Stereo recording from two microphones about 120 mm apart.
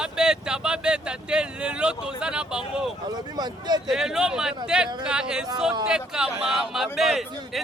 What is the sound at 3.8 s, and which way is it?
A man's voice, 5° right (ahead or behind).